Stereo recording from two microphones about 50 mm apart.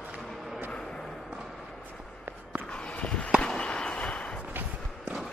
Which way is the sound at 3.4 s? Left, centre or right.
Centre.